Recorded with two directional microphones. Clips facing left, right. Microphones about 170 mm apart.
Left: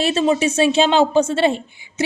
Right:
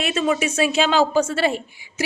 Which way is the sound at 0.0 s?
30° left (ahead or behind).